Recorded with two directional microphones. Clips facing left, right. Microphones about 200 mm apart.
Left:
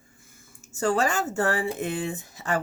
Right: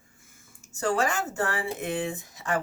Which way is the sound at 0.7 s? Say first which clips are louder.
Left 2 dB; 35° left (ahead or behind).